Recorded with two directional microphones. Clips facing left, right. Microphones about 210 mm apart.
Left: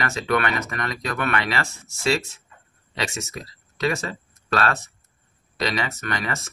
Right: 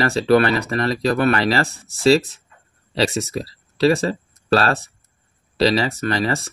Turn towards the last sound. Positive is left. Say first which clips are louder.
# right 8 dB
turn(degrees=-30)  # may be behind; listen again after turning